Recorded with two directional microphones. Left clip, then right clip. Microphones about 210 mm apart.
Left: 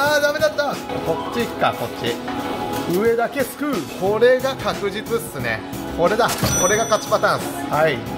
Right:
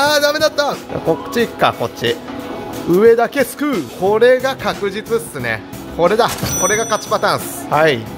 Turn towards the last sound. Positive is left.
turn(degrees=-45)  # may be behind; listen again after turning